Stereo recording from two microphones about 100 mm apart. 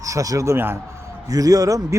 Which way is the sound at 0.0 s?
35° right (ahead or behind).